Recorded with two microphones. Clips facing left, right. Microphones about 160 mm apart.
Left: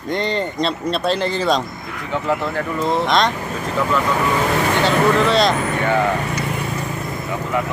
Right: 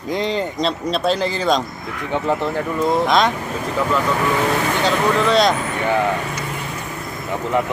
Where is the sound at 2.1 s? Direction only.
20° right (ahead or behind).